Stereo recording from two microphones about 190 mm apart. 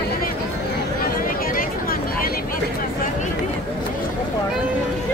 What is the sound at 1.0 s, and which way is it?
Vehicle, 50° left (ahead or behind).